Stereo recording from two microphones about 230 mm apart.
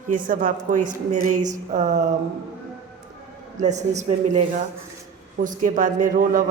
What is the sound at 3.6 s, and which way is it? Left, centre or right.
A man's voice, right.